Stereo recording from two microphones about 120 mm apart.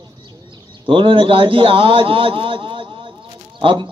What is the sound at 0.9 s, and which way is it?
A man's voice, 45° right (ahead or behind).